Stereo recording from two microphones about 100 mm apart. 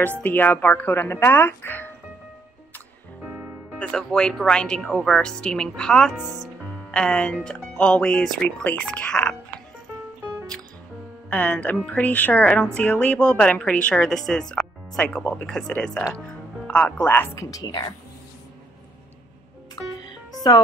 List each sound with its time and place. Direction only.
0.2 s speech: 20° left (ahead or behind)
3.3 s music: 25° right (ahead or behind)
3.8 s a woman's voice: 10° left (ahead or behind)
11.2 s a woman's voice: 15° left (ahead or behind)
17.1 s speech: 25° left (ahead or behind)
17.5 s a woman's voice: 40° left (ahead or behind)